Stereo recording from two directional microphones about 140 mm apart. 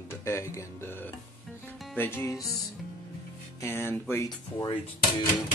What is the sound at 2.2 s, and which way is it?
Speech, 20° left (ahead or behind).